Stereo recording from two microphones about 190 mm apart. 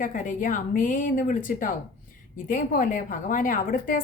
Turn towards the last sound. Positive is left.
turn(degrees=45)  # may be behind; listen again after turning